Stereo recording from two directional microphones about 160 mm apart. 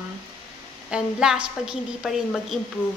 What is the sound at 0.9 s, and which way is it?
A woman's voice, 5° right (ahead or behind).